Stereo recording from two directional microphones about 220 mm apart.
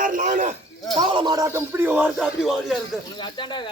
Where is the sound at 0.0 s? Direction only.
35° right (ahead or behind).